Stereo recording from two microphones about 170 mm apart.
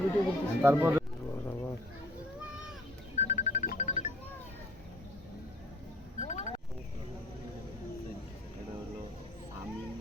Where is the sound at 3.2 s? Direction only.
45° left (ahead or behind).